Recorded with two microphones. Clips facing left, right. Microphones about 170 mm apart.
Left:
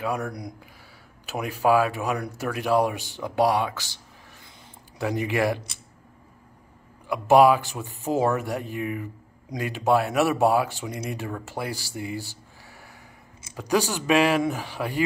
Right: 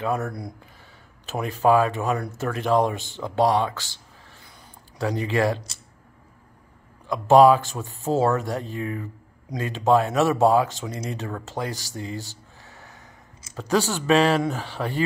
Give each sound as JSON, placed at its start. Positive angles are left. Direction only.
{"t": 0.3, "sound": "speech", "side_deg": 20}
{"t": 7.1, "sound": "speech", "side_deg": 10}
{"t": 11.9, "sound": "a sound", "side_deg": 10}
{"t": 13.6, "sound": "speech", "side_deg": 15}